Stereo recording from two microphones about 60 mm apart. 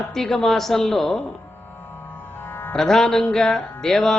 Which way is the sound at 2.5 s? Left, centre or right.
Left.